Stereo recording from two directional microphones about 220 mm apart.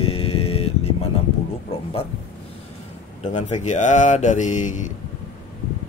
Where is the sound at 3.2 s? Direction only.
30° left (ahead or behind).